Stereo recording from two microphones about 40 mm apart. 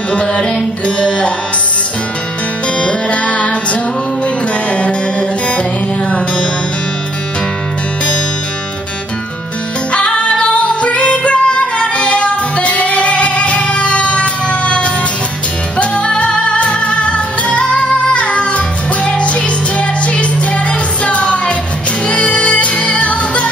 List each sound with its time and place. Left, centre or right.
0.1 s music: left
2.8 s music: left
4.6 s music: left
9.9 s music: left